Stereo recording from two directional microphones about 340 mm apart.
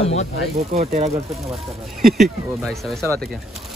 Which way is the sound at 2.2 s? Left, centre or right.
Centre.